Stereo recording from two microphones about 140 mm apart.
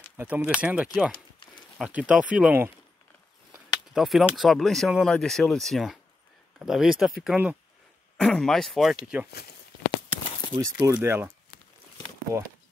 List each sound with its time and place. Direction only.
0.2 s speech: 10° right (ahead or behind)
3.9 s speech: centre (ahead or behind)
10.6 s speech: 20° right (ahead or behind)
12.3 s speech: 20° right (ahead or behind)